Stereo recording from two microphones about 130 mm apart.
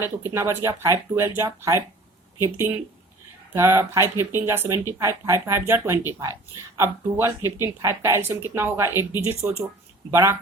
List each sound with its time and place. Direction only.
0.3 s speech: 20° right (ahead or behind)